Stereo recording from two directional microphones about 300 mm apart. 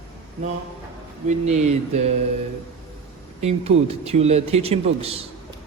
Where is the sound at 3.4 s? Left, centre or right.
Right.